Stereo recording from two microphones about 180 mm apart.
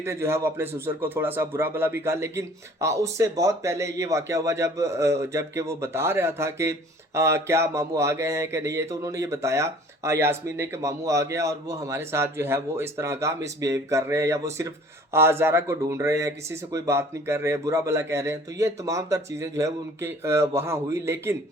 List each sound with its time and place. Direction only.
0.0 s speech: 15° right (ahead or behind)